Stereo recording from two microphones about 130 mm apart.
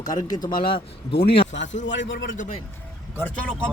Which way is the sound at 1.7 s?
90° left.